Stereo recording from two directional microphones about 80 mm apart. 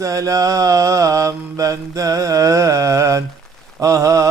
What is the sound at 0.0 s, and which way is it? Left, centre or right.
Mantra, right.